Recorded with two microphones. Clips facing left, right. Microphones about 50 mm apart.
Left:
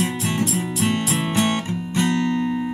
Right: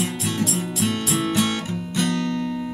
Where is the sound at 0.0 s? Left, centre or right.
Left.